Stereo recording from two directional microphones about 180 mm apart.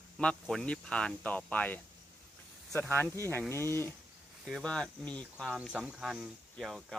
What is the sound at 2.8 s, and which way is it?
Speech, 10° left (ahead or behind).